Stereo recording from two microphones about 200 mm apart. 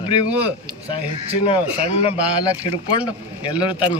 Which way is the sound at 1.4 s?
30° left (ahead or behind).